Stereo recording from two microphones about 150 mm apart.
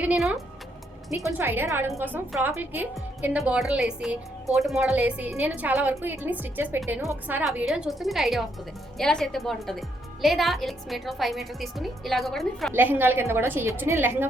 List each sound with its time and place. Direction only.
0.0 s a woman's voice: 5° right (ahead or behind)
1.1 s speech: 15° right (ahead or behind)
7.4 s a woman's voice: centre (ahead or behind)
12.7 s speech: 15° right (ahead or behind)